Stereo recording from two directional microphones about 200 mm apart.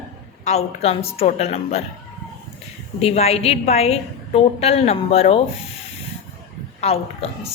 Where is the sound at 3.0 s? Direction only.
30° left (ahead or behind).